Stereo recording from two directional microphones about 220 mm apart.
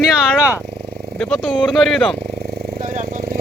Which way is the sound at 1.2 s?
Centre (ahead or behind).